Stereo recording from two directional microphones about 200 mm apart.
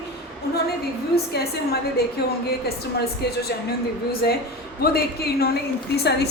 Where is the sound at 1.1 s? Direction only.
50° left (ahead or behind).